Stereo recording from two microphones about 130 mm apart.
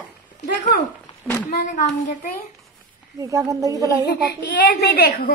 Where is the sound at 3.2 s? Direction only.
25° right (ahead or behind).